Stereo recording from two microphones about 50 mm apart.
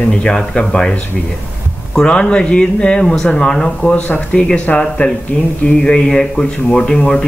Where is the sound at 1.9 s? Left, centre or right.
Left.